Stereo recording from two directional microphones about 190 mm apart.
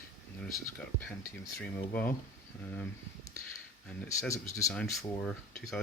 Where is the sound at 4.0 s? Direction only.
15° left (ahead or behind).